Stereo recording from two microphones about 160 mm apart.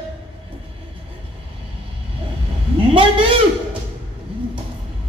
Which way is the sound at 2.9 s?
35° right (ahead or behind).